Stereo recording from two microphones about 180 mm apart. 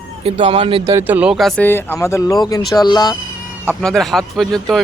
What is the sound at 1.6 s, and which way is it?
Speech, 10° left (ahead or behind).